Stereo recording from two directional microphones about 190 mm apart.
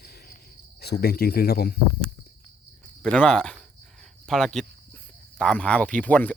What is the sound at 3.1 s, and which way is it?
Speech, 5° left (ahead or behind).